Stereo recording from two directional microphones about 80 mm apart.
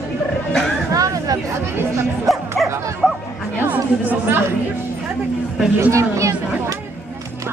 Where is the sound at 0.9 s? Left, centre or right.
Right.